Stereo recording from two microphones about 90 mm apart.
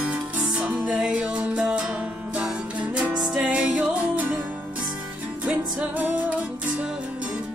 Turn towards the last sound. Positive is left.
turn(degrees=-20)  # may be behind; listen again after turning